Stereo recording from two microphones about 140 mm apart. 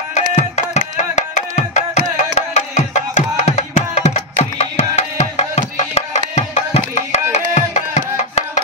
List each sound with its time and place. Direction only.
0.1 s music: 55° left (ahead or behind)